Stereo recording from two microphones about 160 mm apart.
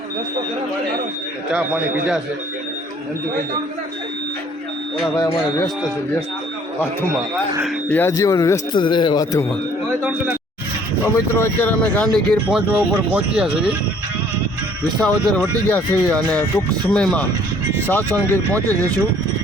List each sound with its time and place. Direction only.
1.5 s speech: 5° right (ahead or behind)
5.1 s speech: 25° left (ahead or behind)
7.9 s speech: 10° left (ahead or behind)
10.0 s speech: 10° right (ahead or behind)
11.0 s speech: 15° left (ahead or behind); by 13.7 s 5° right (ahead or behind)
15.0 s speech: 5° left (ahead or behind)